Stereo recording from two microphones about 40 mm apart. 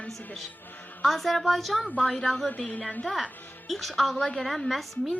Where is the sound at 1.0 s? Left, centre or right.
Centre.